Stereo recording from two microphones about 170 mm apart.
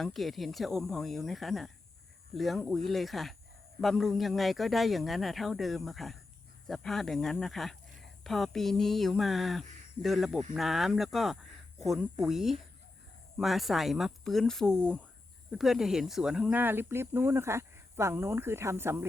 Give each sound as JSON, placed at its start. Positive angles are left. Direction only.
{"t": 0.0, "sound": "speech", "side_deg": 0}